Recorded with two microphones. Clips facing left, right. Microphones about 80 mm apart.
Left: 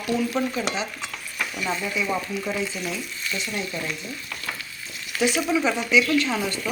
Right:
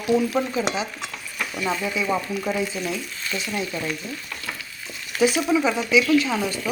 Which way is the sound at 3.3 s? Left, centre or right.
Right.